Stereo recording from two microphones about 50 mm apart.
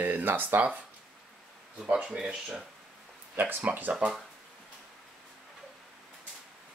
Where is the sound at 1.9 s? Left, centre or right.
Centre.